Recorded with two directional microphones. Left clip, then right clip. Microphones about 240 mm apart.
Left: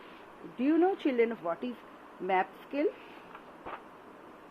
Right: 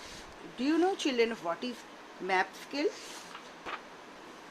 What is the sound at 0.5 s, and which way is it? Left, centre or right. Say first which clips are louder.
Speech: left 2 dB; centre.